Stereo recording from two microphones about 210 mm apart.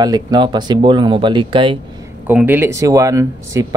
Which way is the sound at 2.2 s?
10° right (ahead or behind).